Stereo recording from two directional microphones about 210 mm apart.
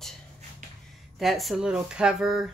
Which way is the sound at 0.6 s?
35° right (ahead or behind).